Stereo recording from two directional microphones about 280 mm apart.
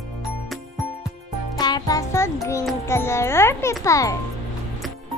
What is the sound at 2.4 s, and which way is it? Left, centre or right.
A child's voice, centre.